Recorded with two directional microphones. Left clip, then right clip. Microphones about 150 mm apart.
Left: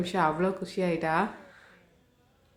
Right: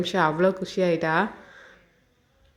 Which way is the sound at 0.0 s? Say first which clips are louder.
Right 5 dB; 25° right (ahead or behind).